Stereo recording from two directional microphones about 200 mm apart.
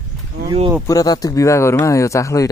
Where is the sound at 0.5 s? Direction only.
25° right (ahead or behind).